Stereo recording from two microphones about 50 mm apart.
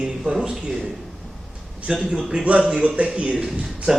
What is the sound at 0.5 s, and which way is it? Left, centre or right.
Speech, centre.